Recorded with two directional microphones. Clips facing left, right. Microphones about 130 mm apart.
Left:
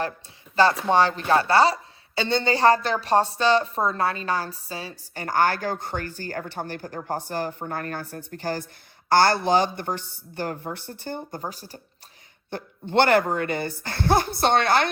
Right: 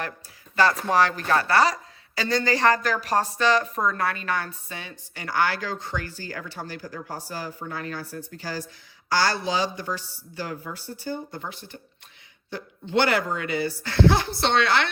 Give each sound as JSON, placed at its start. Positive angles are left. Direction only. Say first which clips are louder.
{"t": 0.5, "sound": "a woman's voice", "louder": "left 2 dB", "side_deg": 30}
{"t": 5.1, "sound": "speech", "louder": "left 3 dB", "side_deg": 45}
{"t": 11.3, "sound": "speech", "louder": "left 2 dB", "side_deg": 40}
{"t": 12.5, "sound": "speech", "louder": "left 2 dB", "side_deg": 55}